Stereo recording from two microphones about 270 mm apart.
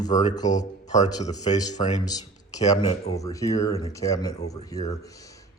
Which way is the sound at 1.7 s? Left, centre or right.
Left.